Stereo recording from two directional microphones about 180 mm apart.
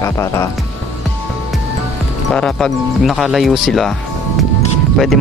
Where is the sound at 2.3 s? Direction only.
5° left (ahead or behind).